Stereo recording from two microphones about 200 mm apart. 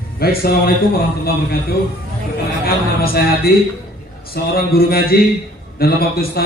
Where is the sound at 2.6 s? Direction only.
50° left (ahead or behind).